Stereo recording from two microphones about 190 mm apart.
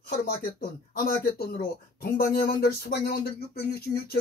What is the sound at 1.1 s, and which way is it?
Speech, 50° left (ahead or behind).